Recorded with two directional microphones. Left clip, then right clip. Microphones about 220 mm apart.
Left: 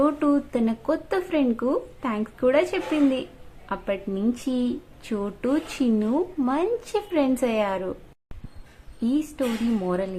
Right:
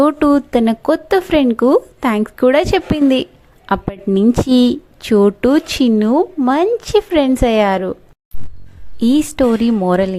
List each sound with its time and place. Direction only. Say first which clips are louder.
0.0 s a woman's voice: right 9 dB; 40° right (ahead or behind)
9.0 s a woman's voice: right 12 dB; 40° right (ahead or behind)